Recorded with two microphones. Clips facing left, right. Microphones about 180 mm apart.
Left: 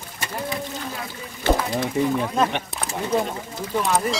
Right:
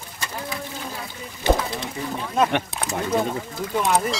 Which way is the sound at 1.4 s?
15° right (ahead or behind).